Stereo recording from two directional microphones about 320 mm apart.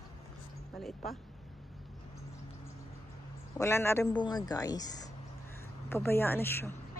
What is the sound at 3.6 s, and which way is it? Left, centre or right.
Speech, centre.